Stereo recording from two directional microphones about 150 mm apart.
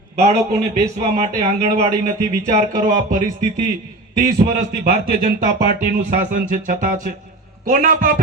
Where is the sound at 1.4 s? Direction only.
45° right (ahead or behind).